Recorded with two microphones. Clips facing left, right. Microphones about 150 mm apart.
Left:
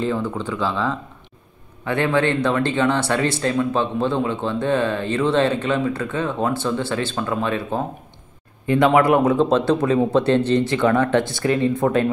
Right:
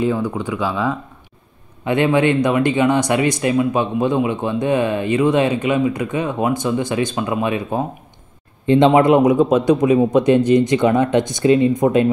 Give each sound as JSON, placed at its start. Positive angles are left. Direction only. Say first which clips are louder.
{"t": 0.0, "sound": "a man's voice", "louder": "right 3 dB", "side_deg": -15}